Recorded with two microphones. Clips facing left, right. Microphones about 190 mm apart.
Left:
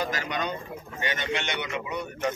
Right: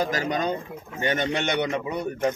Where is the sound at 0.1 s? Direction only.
40° right (ahead or behind).